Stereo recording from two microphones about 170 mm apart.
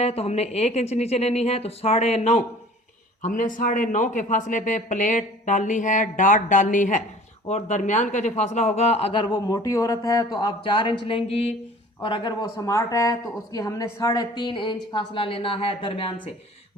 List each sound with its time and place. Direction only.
0.0 s speech: 40° left (ahead or behind)